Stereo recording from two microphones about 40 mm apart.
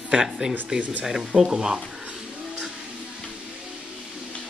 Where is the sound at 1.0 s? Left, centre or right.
Centre.